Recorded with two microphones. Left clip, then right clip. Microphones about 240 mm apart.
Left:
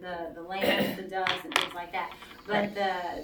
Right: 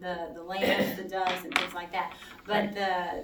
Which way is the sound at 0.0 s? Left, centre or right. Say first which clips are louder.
Right 1 dB; right.